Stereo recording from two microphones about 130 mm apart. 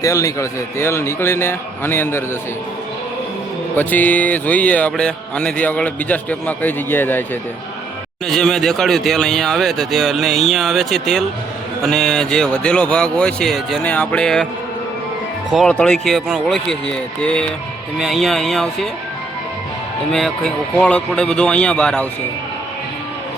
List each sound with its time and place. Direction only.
0.0 s a man's voice: 25° left (ahead or behind)
3.8 s mantra: 15° left (ahead or behind)
8.3 s speech: 5° left (ahead or behind)
15.7 s speech: 5° left (ahead or behind)
20.1 s mantra: 5° left (ahead or behind)